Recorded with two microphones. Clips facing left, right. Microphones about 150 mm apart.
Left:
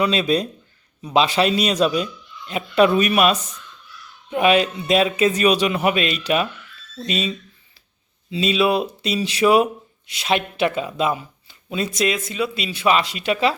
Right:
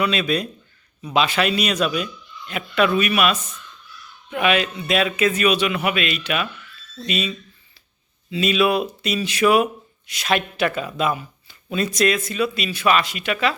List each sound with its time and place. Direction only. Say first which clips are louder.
0.0 s a man's voice: left 2 dB; 30° left (ahead or behind)
8.3 s speech: even; 25° left (ahead or behind)